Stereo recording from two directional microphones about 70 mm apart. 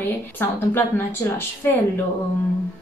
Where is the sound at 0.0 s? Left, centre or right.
Left.